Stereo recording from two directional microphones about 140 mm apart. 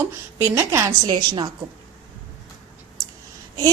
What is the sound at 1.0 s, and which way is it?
Speech, 30° right (ahead or behind).